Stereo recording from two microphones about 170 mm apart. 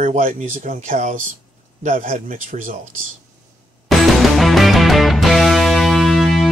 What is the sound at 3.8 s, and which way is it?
Music, centre (ahead or behind).